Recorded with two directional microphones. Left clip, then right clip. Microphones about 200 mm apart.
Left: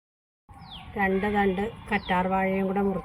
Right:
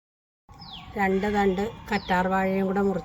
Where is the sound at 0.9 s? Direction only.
5° right (ahead or behind).